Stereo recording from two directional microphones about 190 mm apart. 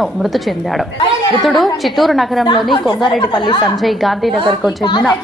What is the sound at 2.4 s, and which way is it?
A woman's voice, 25° left (ahead or behind).